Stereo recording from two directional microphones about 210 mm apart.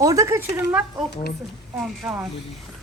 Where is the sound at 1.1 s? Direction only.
50° left (ahead or behind).